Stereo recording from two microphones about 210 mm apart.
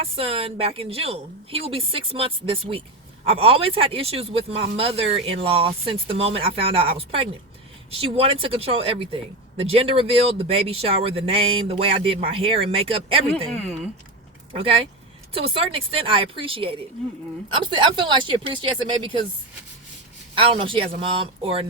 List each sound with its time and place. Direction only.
0.2 s speech: 25° right (ahead or behind)
14.5 s speech: 25° right (ahead or behind)
20.3 s speech: 25° right (ahead or behind)